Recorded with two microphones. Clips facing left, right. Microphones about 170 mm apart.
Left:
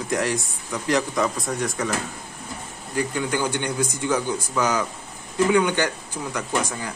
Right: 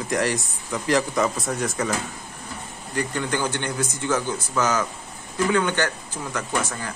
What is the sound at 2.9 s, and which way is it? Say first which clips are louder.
Speech: left 1 dB; 10° left (ahead or behind).